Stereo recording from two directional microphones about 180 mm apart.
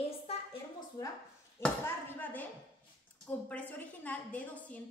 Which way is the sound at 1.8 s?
10° left (ahead or behind).